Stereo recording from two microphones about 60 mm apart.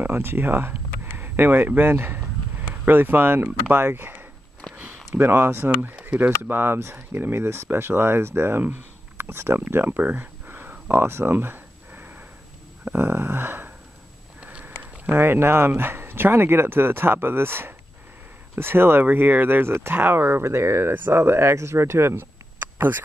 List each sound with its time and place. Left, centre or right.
0.0 s speech: right
5.9 s a sound: right
6.5 s speech: right
14.4 s sniff: centre
14.8 s speech: right